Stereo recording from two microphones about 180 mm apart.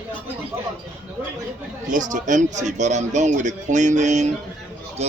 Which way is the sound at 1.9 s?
45° right (ahead or behind).